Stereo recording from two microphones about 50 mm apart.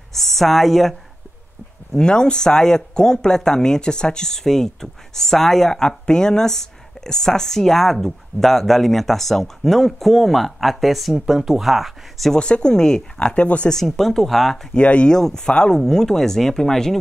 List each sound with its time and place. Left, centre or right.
0.1 s a woman's voice: centre
2.0 s speech: centre
12.4 s speech: centre
13.7 s speech: centre
14.7 s speech: left
15.0 s speech: centre